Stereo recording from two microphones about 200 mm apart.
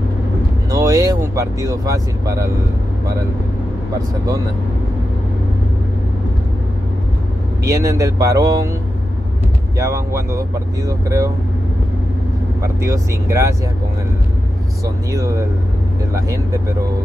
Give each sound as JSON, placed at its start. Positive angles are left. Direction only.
{"t": 0.7, "sound": "speech", "side_deg": -15}
{"t": 7.6, "sound": "speech", "side_deg": -15}
{"t": 9.8, "sound": "speech", "side_deg": -15}
{"t": 12.6, "sound": "speech", "side_deg": -15}
{"t": 15.0, "sound": "speech", "side_deg": -15}